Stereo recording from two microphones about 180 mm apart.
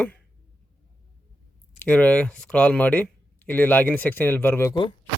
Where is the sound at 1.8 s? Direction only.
10° left (ahead or behind).